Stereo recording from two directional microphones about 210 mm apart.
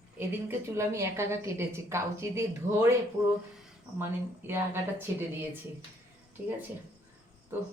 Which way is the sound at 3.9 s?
10° right (ahead or behind).